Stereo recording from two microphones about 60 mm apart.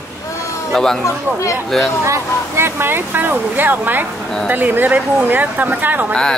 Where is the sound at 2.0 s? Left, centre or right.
Right.